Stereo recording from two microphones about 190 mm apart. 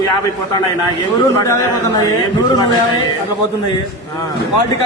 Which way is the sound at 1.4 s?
15° left (ahead or behind).